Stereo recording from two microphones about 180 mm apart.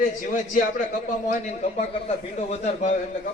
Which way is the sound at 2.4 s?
40° left (ahead or behind).